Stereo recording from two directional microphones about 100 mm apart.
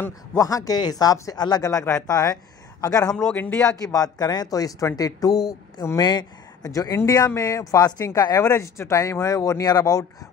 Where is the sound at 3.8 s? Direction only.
40° left (ahead or behind).